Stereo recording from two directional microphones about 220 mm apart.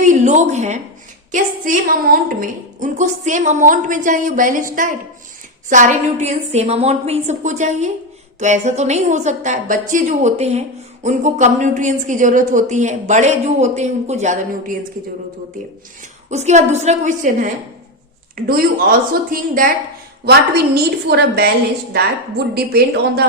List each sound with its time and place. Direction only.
0.1 s a woman's voice: 35° right (ahead or behind)
16.3 s a woman's voice: 30° right (ahead or behind); by 21.5 s 45° right (ahead or behind)
22.5 s a woman's voice: 45° right (ahead or behind)